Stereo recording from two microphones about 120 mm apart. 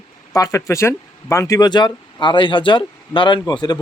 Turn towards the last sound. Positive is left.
turn(degrees=40)  # may be behind; listen again after turning